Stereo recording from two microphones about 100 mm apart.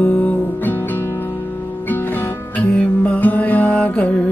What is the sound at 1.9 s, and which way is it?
Music, 15° left (ahead or behind).